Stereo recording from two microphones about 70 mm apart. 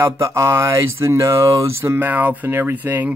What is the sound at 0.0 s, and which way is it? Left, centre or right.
Speech, right.